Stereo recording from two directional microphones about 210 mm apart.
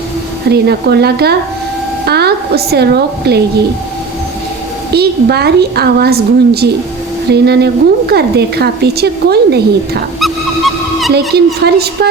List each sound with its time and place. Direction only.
0.5 s a woman's voice: 50° right (ahead or behind)
4.9 s a woman's voice: 50° right (ahead or behind)
10.2 s a sound: centre (ahead or behind)
11.3 s a woman's voice: 50° right (ahead or behind)